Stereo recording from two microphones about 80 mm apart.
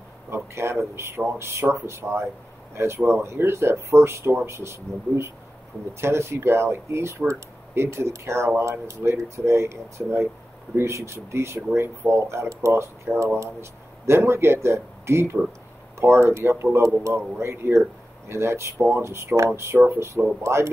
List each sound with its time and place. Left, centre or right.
0.3 s speech: right